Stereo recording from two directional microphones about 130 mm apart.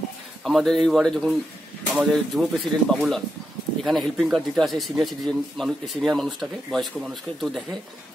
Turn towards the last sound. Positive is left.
turn(degrees=0)  # may be behind; listen again after turning